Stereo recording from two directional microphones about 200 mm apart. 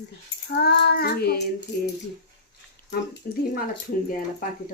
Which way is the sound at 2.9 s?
55° left (ahead or behind).